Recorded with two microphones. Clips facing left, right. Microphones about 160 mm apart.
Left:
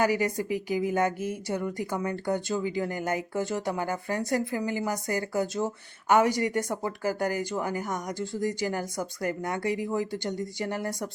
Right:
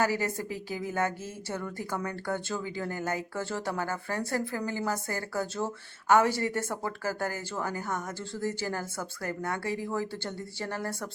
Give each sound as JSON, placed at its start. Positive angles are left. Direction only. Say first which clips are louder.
{"t": 0.0, "sound": "a woman's voice", "louder": "left 3 dB", "side_deg": 15}